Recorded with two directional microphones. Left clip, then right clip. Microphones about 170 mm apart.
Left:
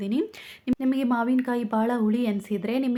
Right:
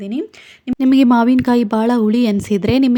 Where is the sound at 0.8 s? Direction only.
55° right (ahead or behind).